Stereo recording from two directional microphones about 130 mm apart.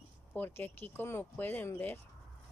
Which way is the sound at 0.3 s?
15° left (ahead or behind).